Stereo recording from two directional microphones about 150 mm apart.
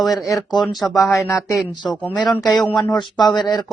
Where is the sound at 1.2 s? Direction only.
20° left (ahead or behind).